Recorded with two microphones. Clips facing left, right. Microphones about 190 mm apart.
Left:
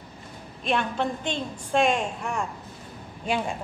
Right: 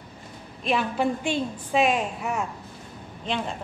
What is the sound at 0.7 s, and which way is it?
A woman's voice, 5° right (ahead or behind).